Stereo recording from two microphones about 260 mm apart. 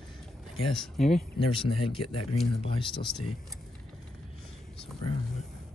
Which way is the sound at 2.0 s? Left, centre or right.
Left.